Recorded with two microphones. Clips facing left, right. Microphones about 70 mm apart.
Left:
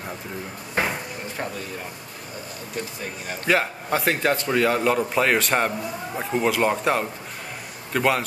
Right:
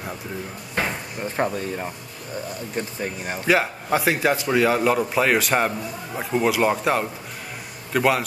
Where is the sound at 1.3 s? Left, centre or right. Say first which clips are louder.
Right 8 dB; right.